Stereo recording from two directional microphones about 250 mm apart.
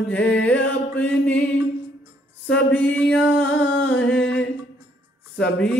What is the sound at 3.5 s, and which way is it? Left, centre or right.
Humming, left.